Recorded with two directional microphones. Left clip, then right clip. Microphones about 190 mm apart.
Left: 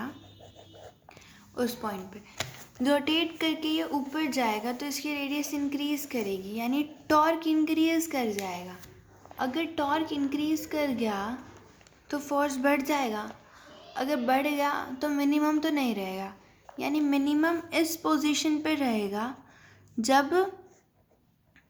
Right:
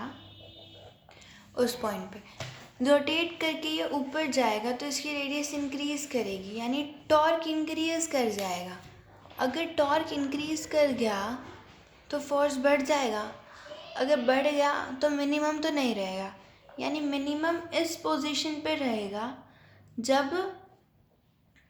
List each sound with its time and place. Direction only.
1.5 s a woman's voice: 15° left (ahead or behind)
12.0 s a woman's voice: 30° left (ahead or behind)